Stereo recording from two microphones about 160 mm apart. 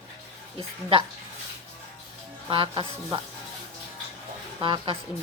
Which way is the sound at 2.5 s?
30° right (ahead or behind).